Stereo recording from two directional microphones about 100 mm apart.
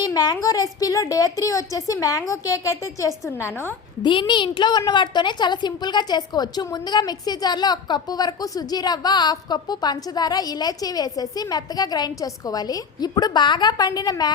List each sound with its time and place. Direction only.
0.0 s a sound: 45° left (ahead or behind)
0.4 s a woman's voice: 35° left (ahead or behind)
4.0 s a woman's voice: 55° left (ahead or behind)